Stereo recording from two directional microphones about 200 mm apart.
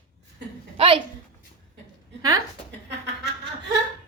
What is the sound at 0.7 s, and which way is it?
Speech, 25° right (ahead or behind).